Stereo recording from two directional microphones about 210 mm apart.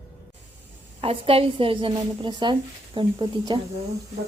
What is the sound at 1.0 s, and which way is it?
A woman's voice, 25° right (ahead or behind).